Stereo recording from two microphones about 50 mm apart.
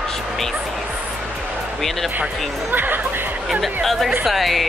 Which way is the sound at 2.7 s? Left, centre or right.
Right.